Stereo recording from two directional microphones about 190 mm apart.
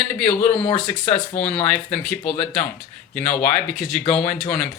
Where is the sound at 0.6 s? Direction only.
30° left (ahead or behind).